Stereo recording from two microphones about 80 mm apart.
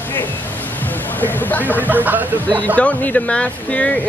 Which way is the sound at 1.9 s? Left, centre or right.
Right.